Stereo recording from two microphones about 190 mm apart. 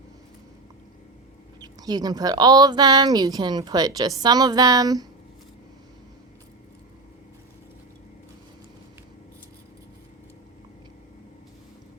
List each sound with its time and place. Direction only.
1.6 s speech: 20° right (ahead or behind)